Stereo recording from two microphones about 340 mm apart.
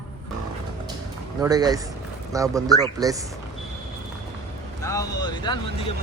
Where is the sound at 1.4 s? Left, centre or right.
Centre.